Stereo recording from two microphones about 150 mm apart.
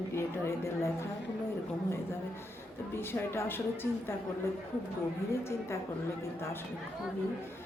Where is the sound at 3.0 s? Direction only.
15° left (ahead or behind).